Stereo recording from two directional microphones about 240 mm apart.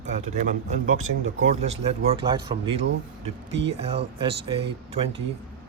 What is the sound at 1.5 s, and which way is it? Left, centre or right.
Speech, right.